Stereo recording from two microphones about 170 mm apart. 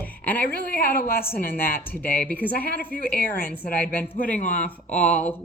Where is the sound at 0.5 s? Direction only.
60° left (ahead or behind).